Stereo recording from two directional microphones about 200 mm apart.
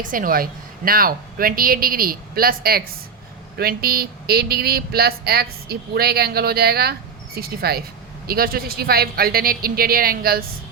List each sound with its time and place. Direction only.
0.0 s speech: 45° right (ahead or behind)